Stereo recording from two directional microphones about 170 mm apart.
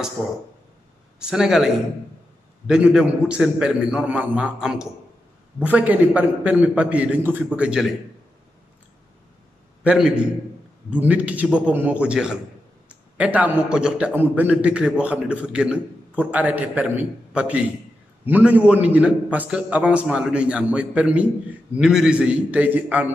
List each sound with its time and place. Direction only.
1.2 s a man's voice: 5° right (ahead or behind)
9.8 s a man's voice: 5° right (ahead or behind)